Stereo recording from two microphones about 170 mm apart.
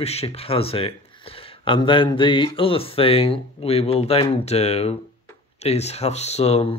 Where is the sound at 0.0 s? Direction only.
35° left (ahead or behind).